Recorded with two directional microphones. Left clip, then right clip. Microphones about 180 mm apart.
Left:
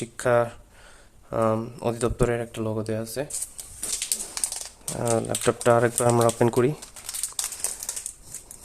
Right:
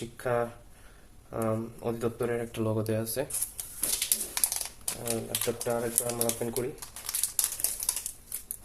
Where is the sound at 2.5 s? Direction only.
15° left (ahead or behind).